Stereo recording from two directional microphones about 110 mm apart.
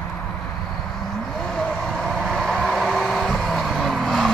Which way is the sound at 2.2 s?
5° left (ahead or behind).